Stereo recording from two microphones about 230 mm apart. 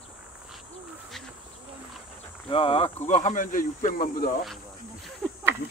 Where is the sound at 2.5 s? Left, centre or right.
Left.